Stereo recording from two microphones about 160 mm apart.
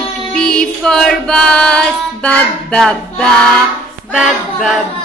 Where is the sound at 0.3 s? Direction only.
5° left (ahead or behind).